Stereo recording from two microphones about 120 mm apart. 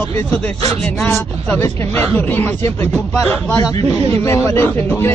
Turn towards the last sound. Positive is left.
turn(degrees=20)  # may be behind; listen again after turning